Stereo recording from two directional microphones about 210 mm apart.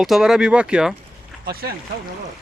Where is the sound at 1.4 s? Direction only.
45° right (ahead or behind).